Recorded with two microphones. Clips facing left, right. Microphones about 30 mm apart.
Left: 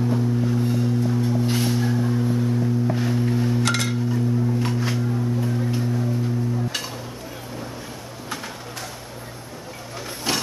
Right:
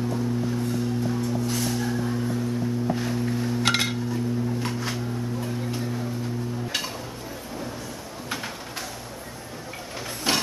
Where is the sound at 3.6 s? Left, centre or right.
Centre.